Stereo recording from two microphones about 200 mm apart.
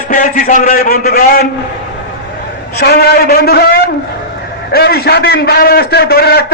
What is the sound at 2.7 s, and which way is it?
A man's voice, 50° left (ahead or behind).